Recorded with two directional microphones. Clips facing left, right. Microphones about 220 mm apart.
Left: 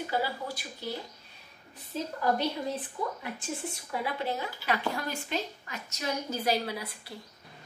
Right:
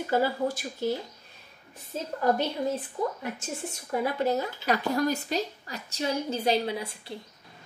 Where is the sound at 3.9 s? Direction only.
40° right (ahead or behind); by 7.1 s 25° right (ahead or behind).